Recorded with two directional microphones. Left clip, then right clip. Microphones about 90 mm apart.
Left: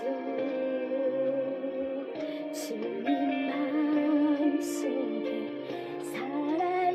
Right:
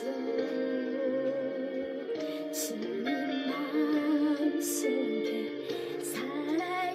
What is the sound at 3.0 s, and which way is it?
Music, 30° left (ahead or behind).